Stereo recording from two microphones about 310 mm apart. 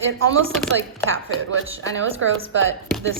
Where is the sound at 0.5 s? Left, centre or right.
Centre.